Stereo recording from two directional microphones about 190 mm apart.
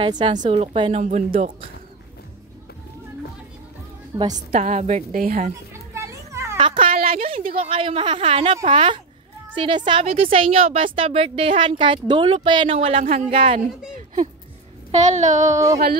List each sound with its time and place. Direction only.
0.0 s a woman's voice: 25° right (ahead or behind)
1.0 s a woman's voice: 40° right (ahead or behind)
4.2 s a woman's voice: 25° right (ahead or behind)
4.6 s a woman's voice: 40° right (ahead or behind)
5.7 s children playing: 15° right (ahead or behind)
6.5 s speech: 25° right (ahead or behind)
6.9 s a sound: 50° right (ahead or behind)
7.2 s a woman's voice: 30° right (ahead or behind)
14.9 s a woman's voice: 40° right (ahead or behind)
15.5 s speech: 15° right (ahead or behind)